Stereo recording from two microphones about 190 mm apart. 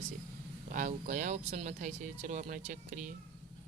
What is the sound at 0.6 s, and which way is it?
Speech, 40° right (ahead or behind).